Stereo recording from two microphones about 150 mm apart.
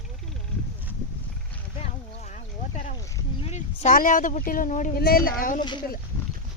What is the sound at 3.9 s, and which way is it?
Speech, 65° left (ahead or behind).